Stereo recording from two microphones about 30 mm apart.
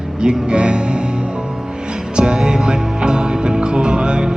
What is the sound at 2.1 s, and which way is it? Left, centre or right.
Music, right.